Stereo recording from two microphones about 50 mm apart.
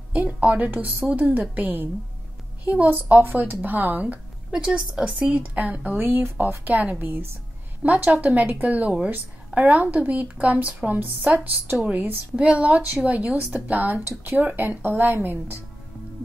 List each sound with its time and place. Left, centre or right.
0.1 s speech: right
4.5 s a woman's voice: centre
5.3 s speech: right
5.9 s speech: right
7.0 s speech: right
7.8 s speech: right
11.8 s speech: right
13.9 s speech: right